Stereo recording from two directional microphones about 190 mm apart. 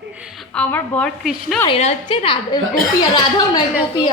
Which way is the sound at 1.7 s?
30° left (ahead or behind).